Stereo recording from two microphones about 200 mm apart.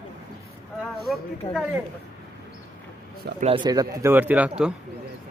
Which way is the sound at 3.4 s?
25° right (ahead or behind).